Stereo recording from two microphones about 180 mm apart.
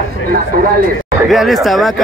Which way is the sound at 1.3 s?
Centre (ahead or behind).